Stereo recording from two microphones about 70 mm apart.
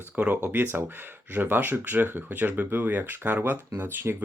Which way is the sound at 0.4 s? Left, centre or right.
Right.